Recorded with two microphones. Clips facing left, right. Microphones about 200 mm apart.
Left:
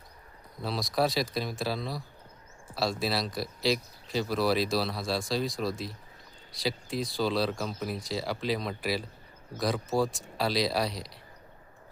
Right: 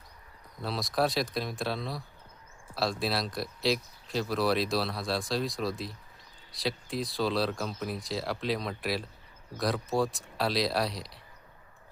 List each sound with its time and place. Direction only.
0.6 s speech: centre (ahead or behind)